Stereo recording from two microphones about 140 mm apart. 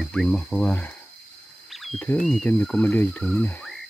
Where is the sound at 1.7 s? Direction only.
Centre (ahead or behind).